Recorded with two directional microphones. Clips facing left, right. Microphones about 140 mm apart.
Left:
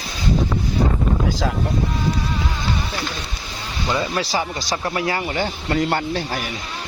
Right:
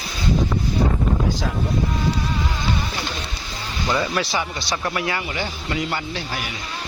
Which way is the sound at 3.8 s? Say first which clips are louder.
Even; 10° left (ahead or behind).